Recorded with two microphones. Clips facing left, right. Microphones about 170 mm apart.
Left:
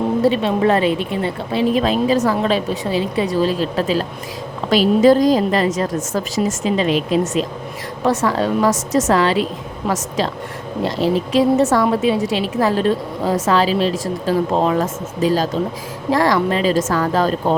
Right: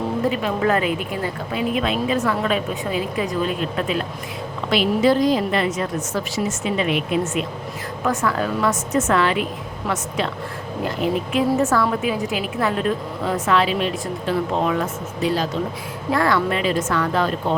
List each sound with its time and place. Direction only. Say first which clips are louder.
0.2 s a woman's voice: left 5 dB; 30° left (ahead or behind)